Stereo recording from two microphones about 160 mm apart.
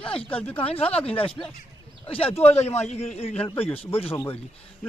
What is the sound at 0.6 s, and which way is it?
Speech, 40° left (ahead or behind).